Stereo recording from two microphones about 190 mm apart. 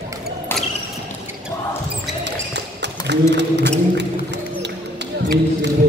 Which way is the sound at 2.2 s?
65° right (ahead or behind).